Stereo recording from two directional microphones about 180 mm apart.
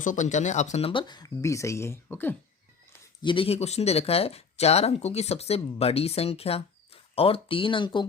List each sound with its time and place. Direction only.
0.0 s speech: 45° left (ahead or behind); by 2.3 s 10° left (ahead or behind)
3.2 s speech: 30° left (ahead or behind)